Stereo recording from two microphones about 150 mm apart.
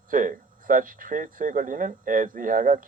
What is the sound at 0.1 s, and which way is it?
Speech, 65° right (ahead or behind).